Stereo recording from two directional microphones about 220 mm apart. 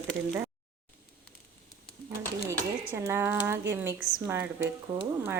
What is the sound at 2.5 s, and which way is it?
Speech, 15° right (ahead or behind).